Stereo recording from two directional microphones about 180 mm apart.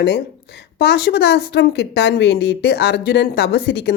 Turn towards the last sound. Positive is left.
turn(degrees=65)  # may be behind; listen again after turning